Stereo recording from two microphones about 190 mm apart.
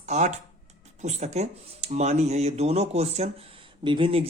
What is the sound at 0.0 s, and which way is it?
Speech, 35° right (ahead or behind).